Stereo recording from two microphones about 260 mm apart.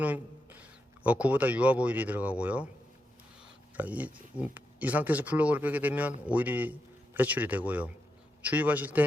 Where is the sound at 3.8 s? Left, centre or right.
Centre.